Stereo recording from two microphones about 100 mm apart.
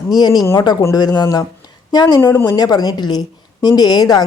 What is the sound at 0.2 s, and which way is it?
A woman's voice, 40° left (ahead or behind).